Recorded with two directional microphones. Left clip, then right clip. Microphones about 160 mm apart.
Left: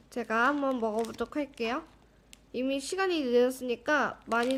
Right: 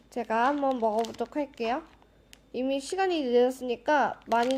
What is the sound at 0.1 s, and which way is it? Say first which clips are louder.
A woman's voice: right 1 dB; 30° left (ahead or behind).